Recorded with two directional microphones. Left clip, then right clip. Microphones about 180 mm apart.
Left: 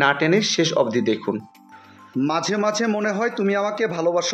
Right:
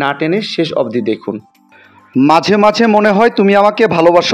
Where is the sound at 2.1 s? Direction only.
45° right (ahead or behind).